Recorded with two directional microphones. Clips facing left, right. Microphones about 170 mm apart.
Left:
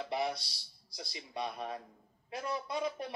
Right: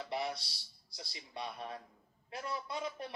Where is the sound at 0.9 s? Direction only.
20° left (ahead or behind).